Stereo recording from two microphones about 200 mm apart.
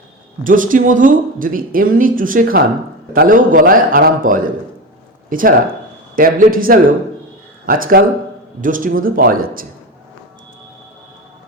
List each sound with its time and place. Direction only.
0.4 s speech: 40° right (ahead or behind)